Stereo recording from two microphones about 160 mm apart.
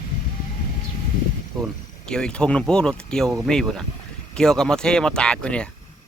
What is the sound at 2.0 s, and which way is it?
Speech, 5° left (ahead or behind).